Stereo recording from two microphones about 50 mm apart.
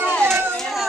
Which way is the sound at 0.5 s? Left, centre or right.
Centre.